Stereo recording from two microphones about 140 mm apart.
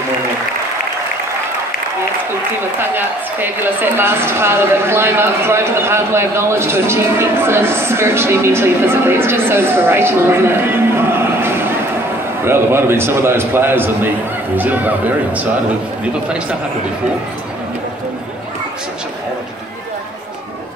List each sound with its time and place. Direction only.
2.9 s a woman's voice: 15° right (ahead or behind)